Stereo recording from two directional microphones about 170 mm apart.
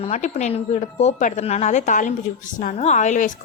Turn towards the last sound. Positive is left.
turn(degrees=45)  # may be behind; listen again after turning